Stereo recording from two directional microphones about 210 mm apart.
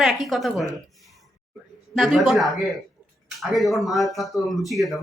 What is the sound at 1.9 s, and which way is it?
Speech, centre (ahead or behind).